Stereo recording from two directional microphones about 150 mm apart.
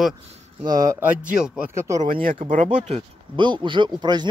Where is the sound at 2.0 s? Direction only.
65° right (ahead or behind).